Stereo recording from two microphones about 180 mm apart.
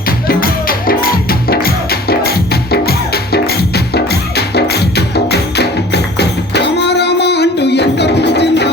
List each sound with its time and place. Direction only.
0.3 s music: 55° left (ahead or behind); by 8.7 s 70° left (ahead or behind)